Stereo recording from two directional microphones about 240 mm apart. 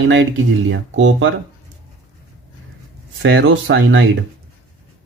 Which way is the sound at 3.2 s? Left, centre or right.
Right.